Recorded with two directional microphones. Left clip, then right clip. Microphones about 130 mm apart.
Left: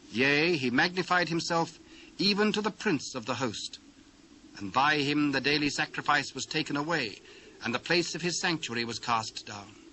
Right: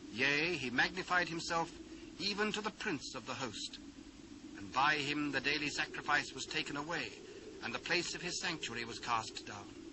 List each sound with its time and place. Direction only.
0.2 s a man's voice: 25° left (ahead or behind)
4.7 s a man's voice: 25° left (ahead or behind)